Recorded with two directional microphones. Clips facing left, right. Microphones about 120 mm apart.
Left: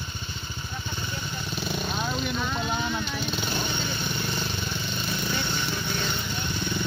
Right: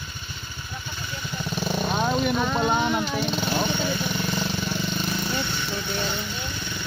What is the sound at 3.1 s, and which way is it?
Dog, 40° right (ahead or behind).